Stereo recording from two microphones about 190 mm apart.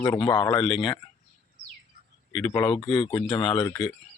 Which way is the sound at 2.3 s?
10° left (ahead or behind).